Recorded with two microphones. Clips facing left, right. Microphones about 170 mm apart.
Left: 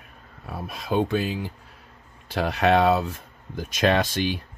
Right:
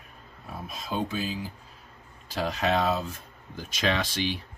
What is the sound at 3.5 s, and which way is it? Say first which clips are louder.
Speech: left 6 dB; 50° left (ahead or behind).